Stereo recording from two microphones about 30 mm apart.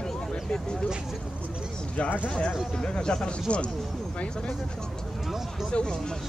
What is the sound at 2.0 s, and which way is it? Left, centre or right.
Speech, left.